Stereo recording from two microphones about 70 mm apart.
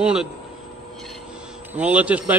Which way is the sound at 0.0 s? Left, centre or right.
Centre.